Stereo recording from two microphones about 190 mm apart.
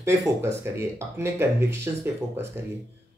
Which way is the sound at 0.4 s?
15° right (ahead or behind).